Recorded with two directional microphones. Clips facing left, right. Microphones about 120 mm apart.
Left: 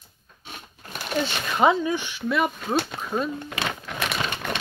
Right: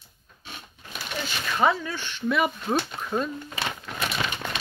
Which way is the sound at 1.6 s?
20° left (ahead or behind).